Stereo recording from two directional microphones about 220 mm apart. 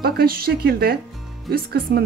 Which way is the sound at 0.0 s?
45° right (ahead or behind).